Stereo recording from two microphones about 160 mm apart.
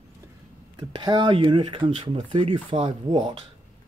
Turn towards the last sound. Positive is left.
turn(degrees=-30)  # may be behind; listen again after turning